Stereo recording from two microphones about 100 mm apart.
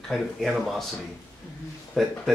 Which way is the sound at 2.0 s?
Centre (ahead or behind).